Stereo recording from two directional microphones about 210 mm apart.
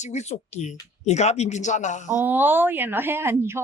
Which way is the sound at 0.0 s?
35° left (ahead or behind).